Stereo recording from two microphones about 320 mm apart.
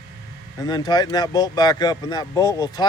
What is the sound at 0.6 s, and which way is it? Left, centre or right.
Speech, centre.